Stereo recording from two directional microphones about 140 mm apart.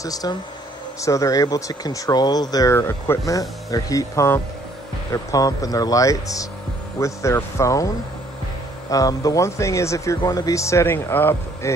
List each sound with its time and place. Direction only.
0.0 s speech: 25° left (ahead or behind)
8.9 s speech: 25° left (ahead or behind)